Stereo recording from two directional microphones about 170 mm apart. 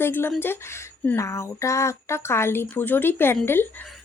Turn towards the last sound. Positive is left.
turn(degrees=10)  # may be behind; listen again after turning